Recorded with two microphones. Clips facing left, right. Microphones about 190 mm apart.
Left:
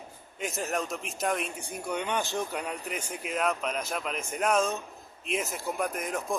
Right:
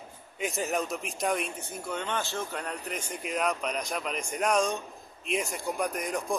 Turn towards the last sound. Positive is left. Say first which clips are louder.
# right 1 dB
turn(degrees=0)  # may be behind; listen again after turning